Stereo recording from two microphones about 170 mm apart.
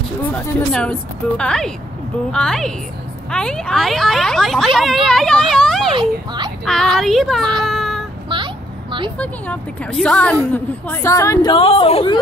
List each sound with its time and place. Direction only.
0.2 s speech: 10° left (ahead or behind)
5.9 s speech: 25° right (ahead or behind)
6.6 s speech: 5° left (ahead or behind)
7.6 s child singing: centre (ahead or behind)
9.2 s speech: 5° left (ahead or behind)
11.5 s speech: 35° left (ahead or behind)